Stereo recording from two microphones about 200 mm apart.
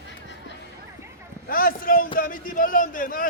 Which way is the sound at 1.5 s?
45° left (ahead or behind).